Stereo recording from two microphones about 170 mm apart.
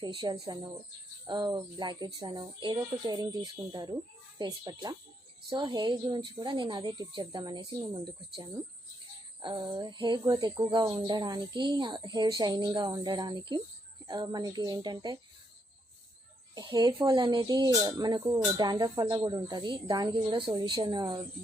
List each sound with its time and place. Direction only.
0.0 s speech: 25° right (ahead or behind)
16.6 s speech: 25° right (ahead or behind)